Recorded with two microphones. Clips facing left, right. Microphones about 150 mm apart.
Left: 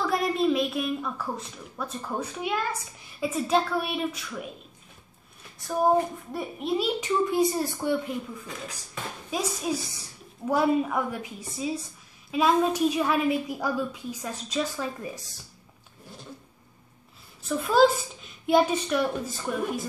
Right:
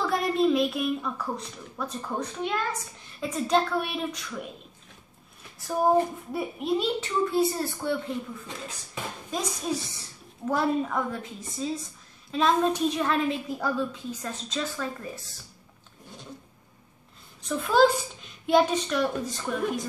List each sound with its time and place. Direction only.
0.0 s a woman's voice: centre (ahead or behind)
5.6 s a woman's voice: centre (ahead or behind)
7.0 s a woman's voice: 15° left (ahead or behind)
9.3 s a woman's voice: 10° left (ahead or behind)
17.4 s a woman's voice: 5° left (ahead or behind)